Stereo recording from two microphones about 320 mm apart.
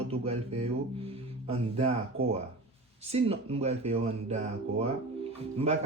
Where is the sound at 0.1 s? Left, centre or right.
Centre.